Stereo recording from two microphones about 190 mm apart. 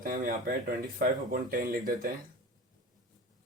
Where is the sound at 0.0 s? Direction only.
45° right (ahead or behind).